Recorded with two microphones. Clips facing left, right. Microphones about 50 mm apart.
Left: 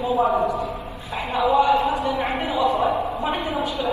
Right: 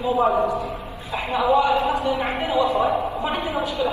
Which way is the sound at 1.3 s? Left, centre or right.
Right.